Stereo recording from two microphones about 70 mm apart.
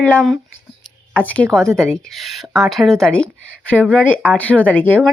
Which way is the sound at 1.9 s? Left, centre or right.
Centre.